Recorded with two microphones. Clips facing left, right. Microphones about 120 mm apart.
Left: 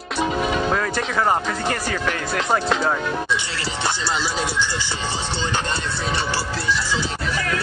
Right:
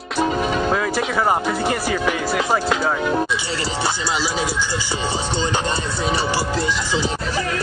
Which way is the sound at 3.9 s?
5° right (ahead or behind).